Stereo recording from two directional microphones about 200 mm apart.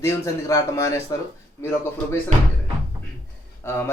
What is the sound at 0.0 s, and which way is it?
Speech, 15° left (ahead or behind).